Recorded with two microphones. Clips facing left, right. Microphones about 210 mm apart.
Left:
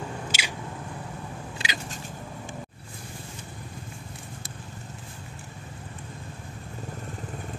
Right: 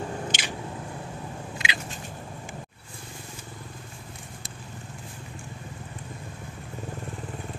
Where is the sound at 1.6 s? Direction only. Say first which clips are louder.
Even; 40° left (ahead or behind).